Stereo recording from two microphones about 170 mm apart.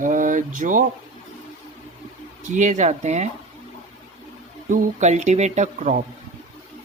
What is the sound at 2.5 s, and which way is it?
Speech, 45° right (ahead or behind).